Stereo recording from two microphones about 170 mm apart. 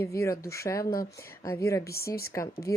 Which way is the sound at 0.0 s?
20° left (ahead or behind).